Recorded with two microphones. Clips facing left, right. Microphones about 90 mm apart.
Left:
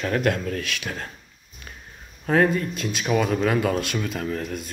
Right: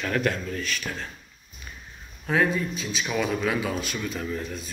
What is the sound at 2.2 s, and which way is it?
Speech, 45° left (ahead or behind).